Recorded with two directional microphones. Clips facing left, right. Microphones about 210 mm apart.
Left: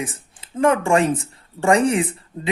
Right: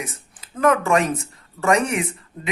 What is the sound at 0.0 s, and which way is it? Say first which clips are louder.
A woman's voice: left 4 dB; 30° left (ahead or behind).